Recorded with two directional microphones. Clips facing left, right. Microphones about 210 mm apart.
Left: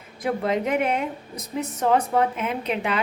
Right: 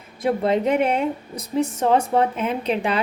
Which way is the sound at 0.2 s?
30° right (ahead or behind).